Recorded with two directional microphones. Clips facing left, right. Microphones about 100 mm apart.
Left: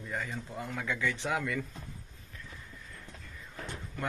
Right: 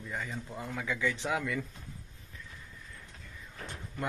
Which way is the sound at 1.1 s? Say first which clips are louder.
Even; 20° left (ahead or behind).